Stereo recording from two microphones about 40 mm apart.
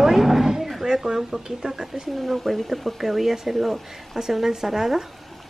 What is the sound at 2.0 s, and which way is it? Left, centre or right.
Speech, centre.